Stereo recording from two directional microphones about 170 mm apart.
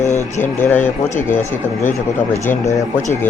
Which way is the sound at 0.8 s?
45° left (ahead or behind).